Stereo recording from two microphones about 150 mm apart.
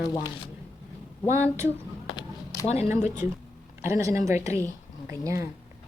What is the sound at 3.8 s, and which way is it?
Speech, 20° right (ahead or behind).